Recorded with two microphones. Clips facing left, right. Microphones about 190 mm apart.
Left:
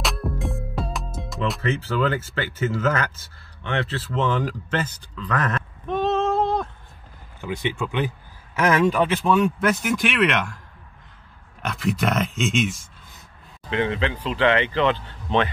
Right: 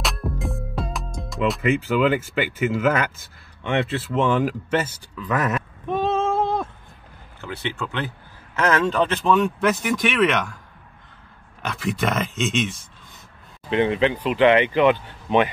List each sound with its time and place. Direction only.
0.0 s music: centre (ahead or behind)
1.6 s speech: 15° right (ahead or behind)
7.3 s speech: 15° left (ahead or behind)
11.6 s speech: centre (ahead or behind)
13.7 s speech: 20° right (ahead or behind)